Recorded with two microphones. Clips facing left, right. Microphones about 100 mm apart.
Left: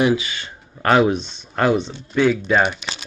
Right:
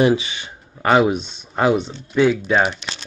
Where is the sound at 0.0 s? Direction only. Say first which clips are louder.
Right 2 dB; 30° right (ahead or behind).